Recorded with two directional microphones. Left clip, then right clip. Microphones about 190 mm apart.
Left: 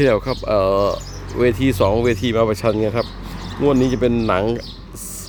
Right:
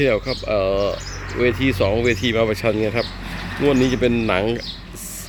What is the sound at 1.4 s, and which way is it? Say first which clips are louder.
Speech: left 2 dB; 15° left (ahead or behind).